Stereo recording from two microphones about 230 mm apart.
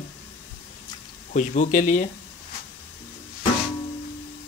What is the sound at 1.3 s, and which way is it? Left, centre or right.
Speech, left.